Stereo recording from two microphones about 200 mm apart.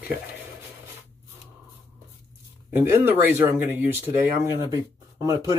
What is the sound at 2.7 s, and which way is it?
Speech, 10° right (ahead or behind).